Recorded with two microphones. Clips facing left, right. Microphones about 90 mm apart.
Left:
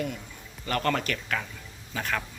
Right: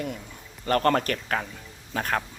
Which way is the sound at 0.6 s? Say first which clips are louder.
Right 5 dB; 40° right (ahead or behind).